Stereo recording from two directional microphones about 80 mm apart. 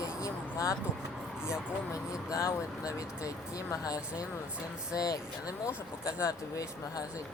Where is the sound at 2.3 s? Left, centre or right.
Left.